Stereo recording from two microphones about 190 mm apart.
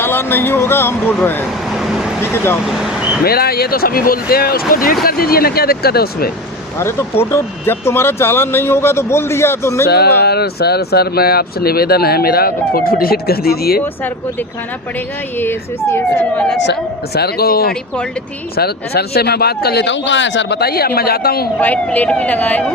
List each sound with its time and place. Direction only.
0.0 s speech: 10° left (ahead or behind)
1.7 s vehicle: centre (ahead or behind)
2.2 s speech: 10° left (ahead or behind)
2.6 s speech: centre (ahead or behind)
3.2 s speech: 55° left (ahead or behind)
6.7 s speech: 15° left (ahead or behind)
9.8 s speech: 60° left (ahead or behind)
13.8 s speech: 10° left (ahead or behind)
17.2 s speech: 55° left (ahead or behind)
21.6 s speech: 10° left (ahead or behind)